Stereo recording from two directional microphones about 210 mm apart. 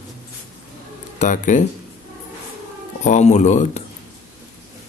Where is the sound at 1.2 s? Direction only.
35° left (ahead or behind).